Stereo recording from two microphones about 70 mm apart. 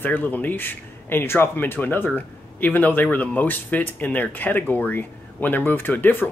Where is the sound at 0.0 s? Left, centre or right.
Left.